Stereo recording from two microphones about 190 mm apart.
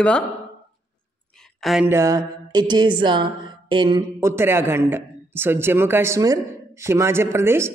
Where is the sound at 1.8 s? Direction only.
15° right (ahead or behind).